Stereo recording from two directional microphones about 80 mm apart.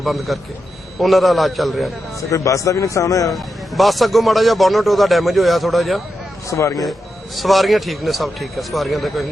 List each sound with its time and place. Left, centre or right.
0.0 s a man's voice: centre
2.3 s a man's voice: left
3.3 s a man's voice: centre
6.5 s speech: left
7.3 s a man's voice: centre